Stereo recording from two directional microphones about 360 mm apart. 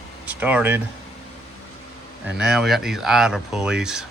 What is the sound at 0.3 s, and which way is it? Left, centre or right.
Speech, centre.